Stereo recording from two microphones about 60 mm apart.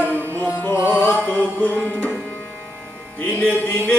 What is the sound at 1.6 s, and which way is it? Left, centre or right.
Music, left.